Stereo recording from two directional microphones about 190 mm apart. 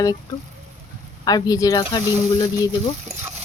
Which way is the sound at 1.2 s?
20° left (ahead or behind).